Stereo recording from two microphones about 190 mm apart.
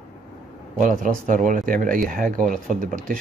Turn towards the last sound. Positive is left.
turn(degrees=-45)  # may be behind; listen again after turning